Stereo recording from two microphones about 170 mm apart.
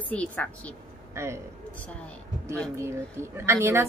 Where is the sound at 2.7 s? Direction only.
15° right (ahead or behind).